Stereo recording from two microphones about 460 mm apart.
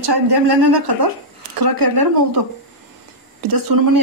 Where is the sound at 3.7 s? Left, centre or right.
Right.